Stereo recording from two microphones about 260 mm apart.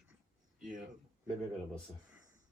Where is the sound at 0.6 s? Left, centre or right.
Right.